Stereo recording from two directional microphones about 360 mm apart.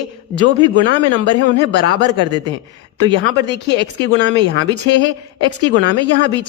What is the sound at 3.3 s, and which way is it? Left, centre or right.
Speech, centre.